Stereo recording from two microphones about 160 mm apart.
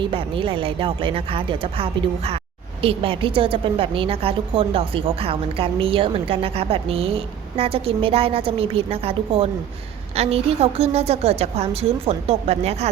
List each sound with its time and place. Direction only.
0.0 s a woman's voice: 35° right (ahead or behind)